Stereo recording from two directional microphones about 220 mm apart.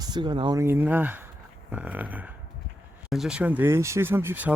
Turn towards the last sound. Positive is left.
turn(degrees=-10)  # may be behind; listen again after turning